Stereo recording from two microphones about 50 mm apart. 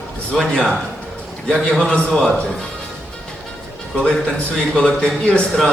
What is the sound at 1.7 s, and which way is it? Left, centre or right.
Speech, centre.